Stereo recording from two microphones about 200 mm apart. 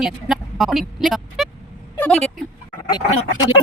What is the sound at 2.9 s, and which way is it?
Speech, 20° left (ahead or behind).